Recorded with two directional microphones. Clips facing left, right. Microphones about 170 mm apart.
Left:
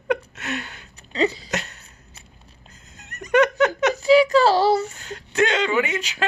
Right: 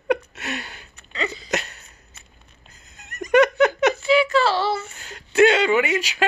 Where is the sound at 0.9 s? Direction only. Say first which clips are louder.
Left 7 dB; 35° left (ahead or behind).